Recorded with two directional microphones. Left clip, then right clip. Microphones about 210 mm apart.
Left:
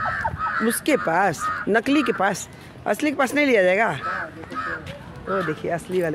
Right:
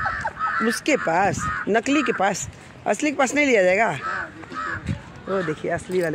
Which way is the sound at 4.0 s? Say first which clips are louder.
Even; 40° left (ahead or behind).